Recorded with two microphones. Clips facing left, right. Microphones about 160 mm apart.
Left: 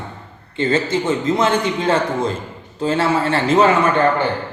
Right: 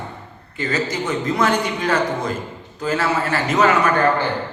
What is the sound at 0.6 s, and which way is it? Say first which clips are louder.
A man's voice: left 5 dB; 25° left (ahead or behind).